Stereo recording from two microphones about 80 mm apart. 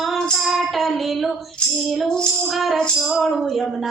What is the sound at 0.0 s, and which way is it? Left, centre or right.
Female singing, centre.